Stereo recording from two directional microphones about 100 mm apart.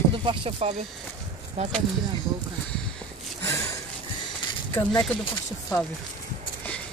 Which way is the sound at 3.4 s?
30° left (ahead or behind).